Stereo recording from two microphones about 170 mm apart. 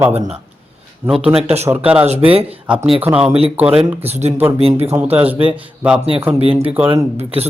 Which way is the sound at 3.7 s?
40° right (ahead or behind).